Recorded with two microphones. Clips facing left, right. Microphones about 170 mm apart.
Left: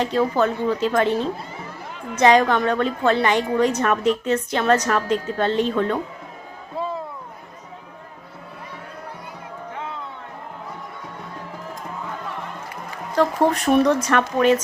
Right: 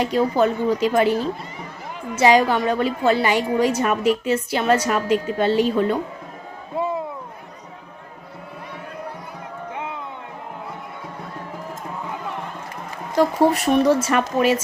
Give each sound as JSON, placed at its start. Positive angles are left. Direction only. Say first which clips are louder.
{"t": 0.0, "sound": "a woman's voice", "louder": "right 1 dB", "side_deg": -15}
{"t": 6.7, "sound": "a sound", "louder": "right 4 dB", "side_deg": -15}
{"t": 9.7, "sound": "music", "louder": "right 1 dB", "side_deg": -15}
{"t": 13.1, "sound": "speech", "louder": "right 2 dB", "side_deg": -5}